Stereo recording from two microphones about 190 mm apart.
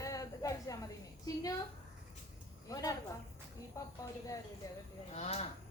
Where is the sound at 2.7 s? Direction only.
20° left (ahead or behind).